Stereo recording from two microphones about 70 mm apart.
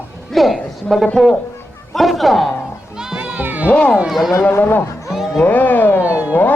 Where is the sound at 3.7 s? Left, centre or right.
Centre.